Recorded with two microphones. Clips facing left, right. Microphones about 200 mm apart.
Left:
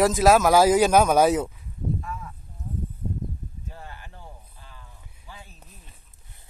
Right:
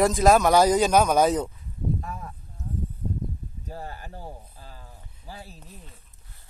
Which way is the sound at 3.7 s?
40° right (ahead or behind).